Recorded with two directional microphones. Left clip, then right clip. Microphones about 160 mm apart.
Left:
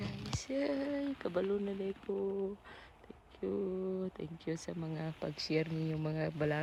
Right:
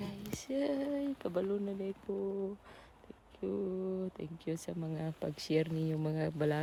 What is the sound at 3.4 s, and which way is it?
Speech, 10° right (ahead or behind).